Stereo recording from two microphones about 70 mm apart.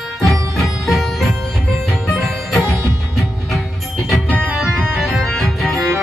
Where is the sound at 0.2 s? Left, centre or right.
Centre.